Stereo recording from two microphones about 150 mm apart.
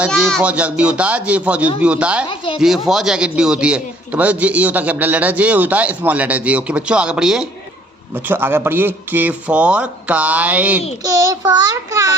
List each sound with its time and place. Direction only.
0.4 s a man's voice: 10° right (ahead or behind)
11.0 s a child's voice: 20° right (ahead or behind)